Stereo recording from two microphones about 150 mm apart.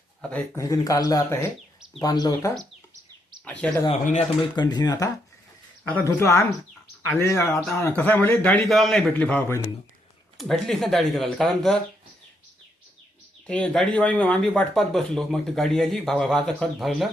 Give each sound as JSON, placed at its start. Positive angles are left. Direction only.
{"t": 0.2, "sound": "speech", "side_deg": 10}
{"t": 0.5, "sound": "speech", "side_deg": 20}
{"t": 3.6, "sound": "a man's voice", "side_deg": 5}
{"t": 4.0, "sound": "speech", "side_deg": 55}
{"t": 4.5, "sound": "a man's voice", "side_deg": 25}
{"t": 9.1, "sound": "a man's voice", "side_deg": 10}
{"t": 10.3, "sound": "speech", "side_deg": 0}
{"t": 13.5, "sound": "speech", "side_deg": 5}